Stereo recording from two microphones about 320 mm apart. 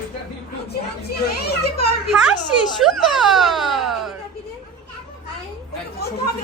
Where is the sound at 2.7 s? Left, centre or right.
Centre.